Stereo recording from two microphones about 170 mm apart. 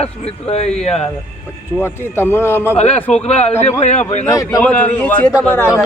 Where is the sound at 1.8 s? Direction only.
15° left (ahead or behind).